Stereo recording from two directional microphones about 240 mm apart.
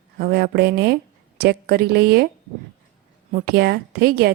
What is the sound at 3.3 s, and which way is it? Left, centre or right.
Speech, right.